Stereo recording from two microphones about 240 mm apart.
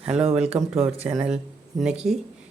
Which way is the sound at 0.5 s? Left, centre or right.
Right.